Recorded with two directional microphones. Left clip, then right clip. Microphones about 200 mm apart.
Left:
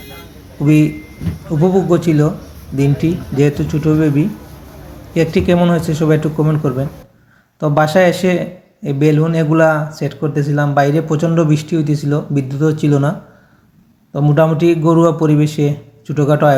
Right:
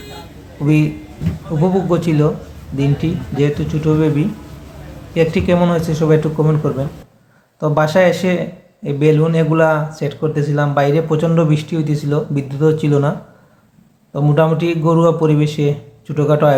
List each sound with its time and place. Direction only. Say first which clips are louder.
0.6 s a man's voice: left 3 dB; 15° left (ahead or behind)